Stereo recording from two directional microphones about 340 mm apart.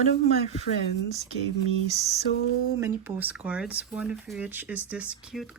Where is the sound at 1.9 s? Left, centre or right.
Centre.